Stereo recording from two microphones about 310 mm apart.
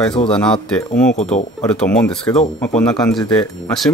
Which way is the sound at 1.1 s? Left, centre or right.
Left.